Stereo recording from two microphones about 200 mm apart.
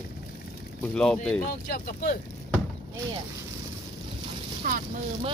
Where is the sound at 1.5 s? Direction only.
50° left (ahead or behind).